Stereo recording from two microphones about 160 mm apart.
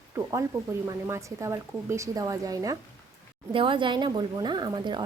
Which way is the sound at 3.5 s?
30° right (ahead or behind).